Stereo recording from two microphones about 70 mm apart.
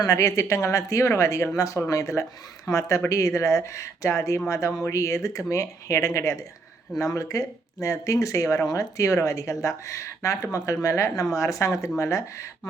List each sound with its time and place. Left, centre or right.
0.0 s speech: left